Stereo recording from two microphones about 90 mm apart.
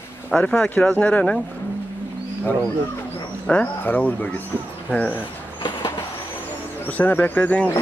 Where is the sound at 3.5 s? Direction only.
20° left (ahead or behind).